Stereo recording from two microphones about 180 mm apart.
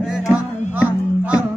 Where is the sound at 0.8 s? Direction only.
5° right (ahead or behind).